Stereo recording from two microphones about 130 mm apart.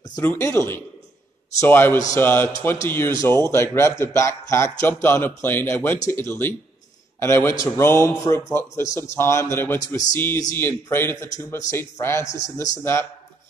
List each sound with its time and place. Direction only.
0.1 s a man's voice: 20° left (ahead or behind)